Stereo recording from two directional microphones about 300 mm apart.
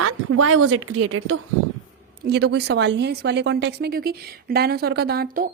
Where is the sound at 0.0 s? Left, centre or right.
Right.